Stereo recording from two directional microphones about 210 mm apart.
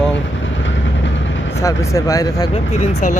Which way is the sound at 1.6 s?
15° left (ahead or behind).